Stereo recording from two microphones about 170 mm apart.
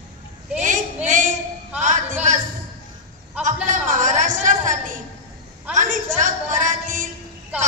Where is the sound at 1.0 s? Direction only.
50° right (ahead or behind).